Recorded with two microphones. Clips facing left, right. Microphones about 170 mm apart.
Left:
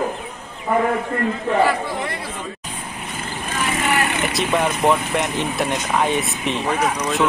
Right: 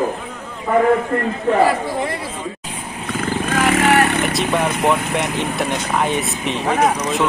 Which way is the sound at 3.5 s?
90° right.